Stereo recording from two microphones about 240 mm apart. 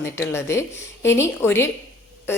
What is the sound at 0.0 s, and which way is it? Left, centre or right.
A woman's voice, centre.